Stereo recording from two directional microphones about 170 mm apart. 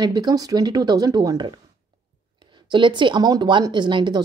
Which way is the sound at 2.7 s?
25° right (ahead or behind).